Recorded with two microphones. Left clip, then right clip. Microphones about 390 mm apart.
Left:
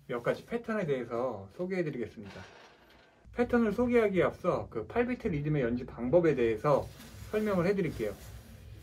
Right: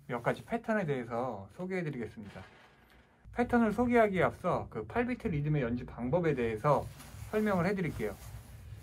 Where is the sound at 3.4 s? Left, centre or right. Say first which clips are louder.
Left 1 dB; right.